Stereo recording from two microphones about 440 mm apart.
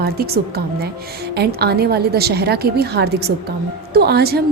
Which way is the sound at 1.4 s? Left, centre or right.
Right.